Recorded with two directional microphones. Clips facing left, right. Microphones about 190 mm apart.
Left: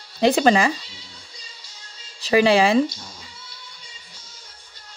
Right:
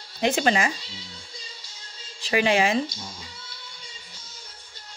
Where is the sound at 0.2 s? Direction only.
35° left (ahead or behind).